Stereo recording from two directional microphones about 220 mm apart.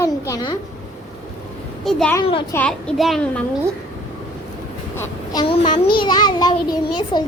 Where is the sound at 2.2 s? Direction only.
25° left (ahead or behind).